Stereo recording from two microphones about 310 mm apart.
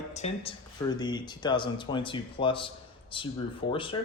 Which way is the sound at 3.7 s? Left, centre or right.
Centre.